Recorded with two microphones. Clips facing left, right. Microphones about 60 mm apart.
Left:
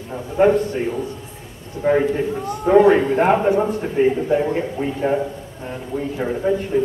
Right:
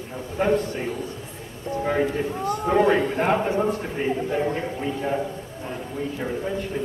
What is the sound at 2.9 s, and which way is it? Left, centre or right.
A man's voice, left.